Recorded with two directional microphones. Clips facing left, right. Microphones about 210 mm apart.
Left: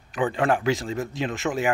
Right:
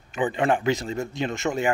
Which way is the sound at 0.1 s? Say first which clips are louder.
Even; centre (ahead or behind).